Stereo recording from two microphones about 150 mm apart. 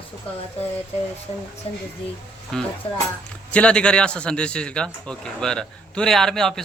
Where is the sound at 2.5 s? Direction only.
5° left (ahead or behind).